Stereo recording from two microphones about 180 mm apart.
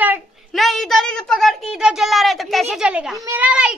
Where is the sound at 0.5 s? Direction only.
Centre (ahead or behind).